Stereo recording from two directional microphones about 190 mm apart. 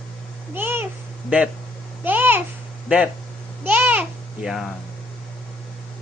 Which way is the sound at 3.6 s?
10° right (ahead or behind).